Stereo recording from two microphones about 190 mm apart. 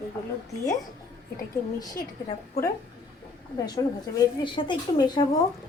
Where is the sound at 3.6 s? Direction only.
20° left (ahead or behind).